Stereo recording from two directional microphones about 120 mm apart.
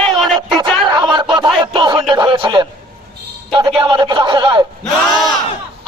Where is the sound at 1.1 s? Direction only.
40° right (ahead or behind).